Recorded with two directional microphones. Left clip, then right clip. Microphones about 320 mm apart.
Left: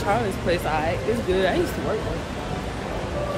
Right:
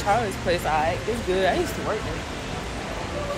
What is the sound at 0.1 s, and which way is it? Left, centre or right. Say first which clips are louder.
Speech: right 1 dB; centre.